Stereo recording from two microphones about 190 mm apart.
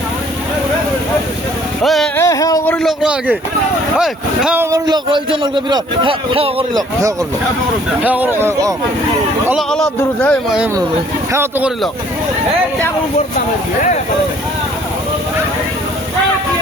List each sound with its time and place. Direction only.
1.8 s speech: centre (ahead or behind)
2.1 s music: 15° left (ahead or behind)
2.7 s a man's voice: centre (ahead or behind); by 6.8 s 30° right (ahead or behind)
8.0 s speech: 10° right (ahead or behind)
9.5 s speech: centre (ahead or behind)
11.3 s speech: 15° right (ahead or behind)